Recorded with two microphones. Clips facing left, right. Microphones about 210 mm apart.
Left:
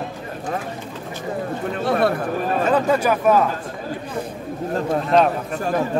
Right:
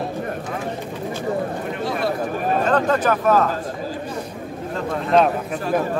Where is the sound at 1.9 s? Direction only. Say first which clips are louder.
Left 5 dB; 60° left (ahead or behind).